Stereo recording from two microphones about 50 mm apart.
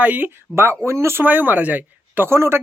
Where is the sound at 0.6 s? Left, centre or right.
Right.